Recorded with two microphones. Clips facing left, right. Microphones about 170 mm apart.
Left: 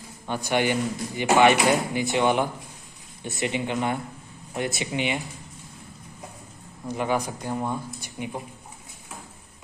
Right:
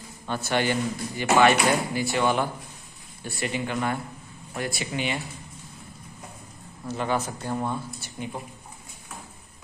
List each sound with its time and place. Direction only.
0.3 s speech: 15° left (ahead or behind)
6.9 s speech: 15° left (ahead or behind)